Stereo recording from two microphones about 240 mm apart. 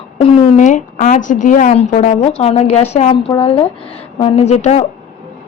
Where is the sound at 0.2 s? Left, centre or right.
Left.